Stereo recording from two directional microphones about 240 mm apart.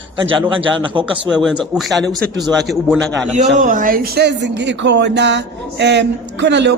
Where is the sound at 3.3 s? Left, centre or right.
Right.